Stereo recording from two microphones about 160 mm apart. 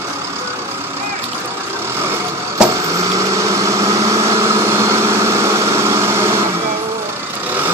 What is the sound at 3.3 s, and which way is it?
Vehicle, 20° right (ahead or behind).